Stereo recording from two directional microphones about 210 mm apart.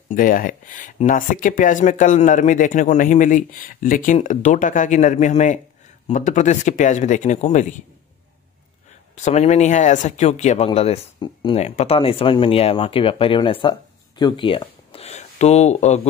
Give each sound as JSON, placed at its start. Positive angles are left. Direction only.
{"t": 0.1, "sound": "speech", "side_deg": 40}
{"t": 9.1, "sound": "speech", "side_deg": 30}